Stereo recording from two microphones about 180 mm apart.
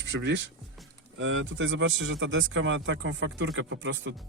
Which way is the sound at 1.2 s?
90° right.